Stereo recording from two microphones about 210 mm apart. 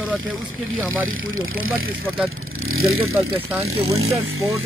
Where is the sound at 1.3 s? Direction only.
70° right (ahead or behind).